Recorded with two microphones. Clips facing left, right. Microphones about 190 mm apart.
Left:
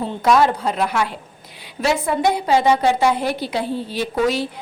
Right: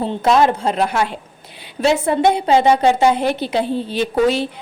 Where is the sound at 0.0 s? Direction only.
25° right (ahead or behind).